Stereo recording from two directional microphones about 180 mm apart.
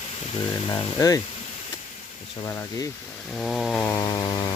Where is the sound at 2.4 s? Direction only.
15° left (ahead or behind).